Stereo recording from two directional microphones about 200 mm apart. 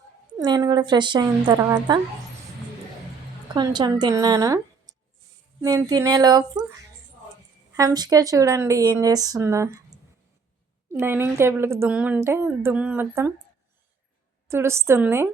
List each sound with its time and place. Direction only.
0.3 s a woman's voice: 20° right (ahead or behind)
3.5 s a woman's voice: 20° right (ahead or behind)
7.8 s a woman's voice: 20° right (ahead or behind)
14.4 s a woman's voice: 15° right (ahead or behind)